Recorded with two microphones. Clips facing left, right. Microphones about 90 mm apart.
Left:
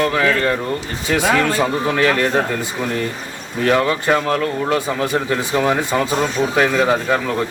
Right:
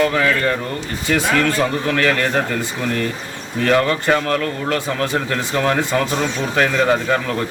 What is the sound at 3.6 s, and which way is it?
Speech, 10° left (ahead or behind).